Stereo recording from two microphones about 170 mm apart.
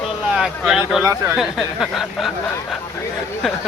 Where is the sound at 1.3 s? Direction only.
Centre (ahead or behind).